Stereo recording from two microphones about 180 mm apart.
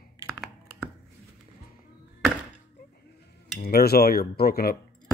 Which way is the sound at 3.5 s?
60° left (ahead or behind).